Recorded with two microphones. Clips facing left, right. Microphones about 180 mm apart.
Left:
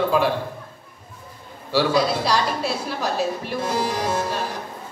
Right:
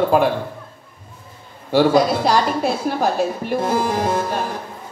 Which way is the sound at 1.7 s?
50° right (ahead or behind).